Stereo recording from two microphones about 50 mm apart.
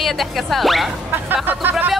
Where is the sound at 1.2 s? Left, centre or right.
Right.